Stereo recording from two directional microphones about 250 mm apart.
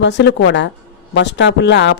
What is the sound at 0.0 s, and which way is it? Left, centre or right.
A woman's voice, left.